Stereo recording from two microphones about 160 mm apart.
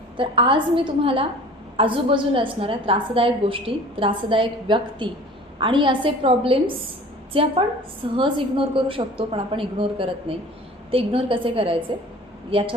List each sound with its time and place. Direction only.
0.2 s a woman's voice: 35° right (ahead or behind)
8.1 s a woman's voice: 30° right (ahead or behind)